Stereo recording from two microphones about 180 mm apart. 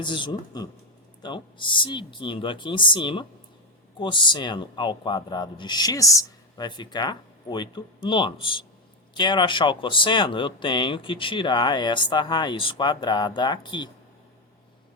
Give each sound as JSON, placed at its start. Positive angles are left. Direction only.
{"t": 0.0, "sound": "speech", "side_deg": 25}